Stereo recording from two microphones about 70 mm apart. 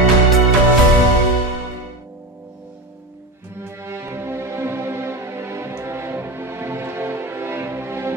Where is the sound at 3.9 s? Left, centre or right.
Right.